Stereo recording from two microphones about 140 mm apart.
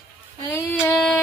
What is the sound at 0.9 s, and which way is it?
Speech, 5° left (ahead or behind).